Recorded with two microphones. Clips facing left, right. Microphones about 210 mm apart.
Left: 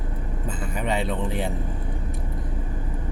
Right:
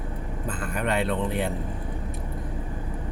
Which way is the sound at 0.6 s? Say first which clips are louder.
Even; 65° right (ahead or behind).